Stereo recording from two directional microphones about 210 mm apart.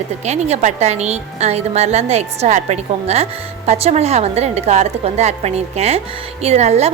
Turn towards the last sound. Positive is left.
turn(degrees=-30)  # may be behind; listen again after turning